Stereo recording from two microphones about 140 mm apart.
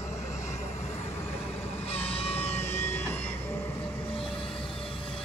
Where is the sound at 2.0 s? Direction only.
45° left (ahead or behind).